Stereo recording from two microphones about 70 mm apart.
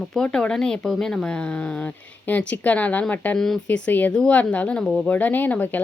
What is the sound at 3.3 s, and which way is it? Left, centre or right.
Speech, centre.